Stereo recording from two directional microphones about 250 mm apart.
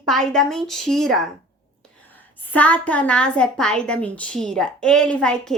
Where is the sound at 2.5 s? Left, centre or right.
Centre.